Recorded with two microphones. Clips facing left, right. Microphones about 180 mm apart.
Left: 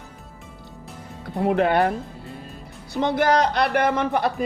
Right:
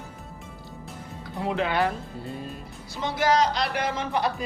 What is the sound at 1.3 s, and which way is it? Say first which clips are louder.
Speech: left 6 dB; 55° left (ahead or behind).